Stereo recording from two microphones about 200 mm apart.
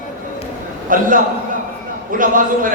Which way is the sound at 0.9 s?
45° right (ahead or behind).